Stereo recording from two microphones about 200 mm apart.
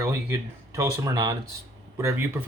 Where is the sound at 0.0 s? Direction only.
15° right (ahead or behind).